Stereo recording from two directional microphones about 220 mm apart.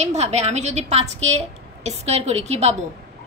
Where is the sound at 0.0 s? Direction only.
30° right (ahead or behind).